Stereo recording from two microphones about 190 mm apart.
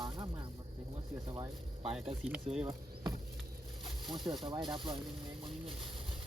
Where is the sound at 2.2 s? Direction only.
5° right (ahead or behind).